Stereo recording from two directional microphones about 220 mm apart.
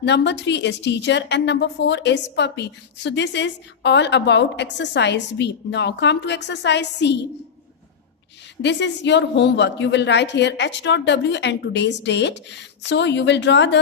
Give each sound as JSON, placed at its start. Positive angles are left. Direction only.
{"t": 0.0, "sound": "a woman's voice", "side_deg": 50}
{"t": 8.6, "sound": "a woman's voice", "side_deg": 55}